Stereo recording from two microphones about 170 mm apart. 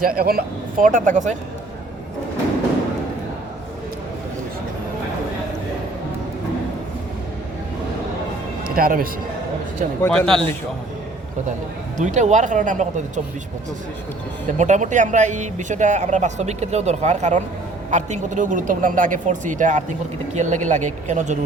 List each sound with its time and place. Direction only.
0.2 s speech: 60° right (ahead or behind)
8.6 s speech: 60° right (ahead or behind)
10.0 s speech: 5° left (ahead or behind)
11.9 s speech: 45° right (ahead or behind)
14.6 s speech: 45° right (ahead or behind)